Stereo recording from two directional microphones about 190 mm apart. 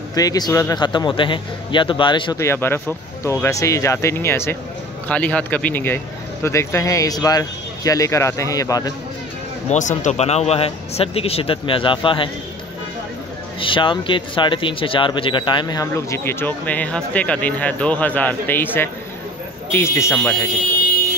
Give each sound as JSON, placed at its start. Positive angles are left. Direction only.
{"t": 0.1, "sound": "a man's voice", "side_deg": 20}
{"t": 2.3, "sound": "speech", "side_deg": 15}
{"t": 9.7, "sound": "speech", "side_deg": 40}
{"t": 13.6, "sound": "speech", "side_deg": 25}